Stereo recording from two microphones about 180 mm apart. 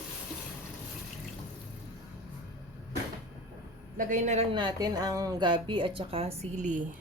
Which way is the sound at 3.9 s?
45° right (ahead or behind).